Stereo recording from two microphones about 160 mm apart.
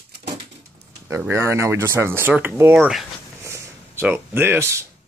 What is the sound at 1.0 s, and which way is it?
Speech, 15° right (ahead or behind).